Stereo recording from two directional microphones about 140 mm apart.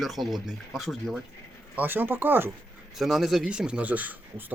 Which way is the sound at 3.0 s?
Centre (ahead or behind).